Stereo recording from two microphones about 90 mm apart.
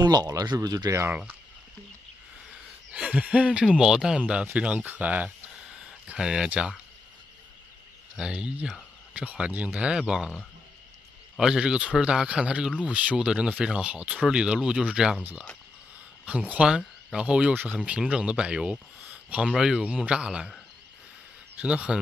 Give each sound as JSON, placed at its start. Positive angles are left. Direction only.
{"t": 0.0, "sound": "speech", "side_deg": -50}
{"t": 2.9, "sound": "speech", "side_deg": -15}
{"t": 8.2, "sound": "speech", "side_deg": -10}
{"t": 16.3, "sound": "speech", "side_deg": -15}
{"t": 21.5, "sound": "speech", "side_deg": -15}